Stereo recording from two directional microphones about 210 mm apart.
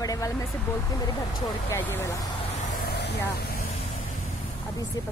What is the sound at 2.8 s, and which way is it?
Vehicle, 50° left (ahead or behind).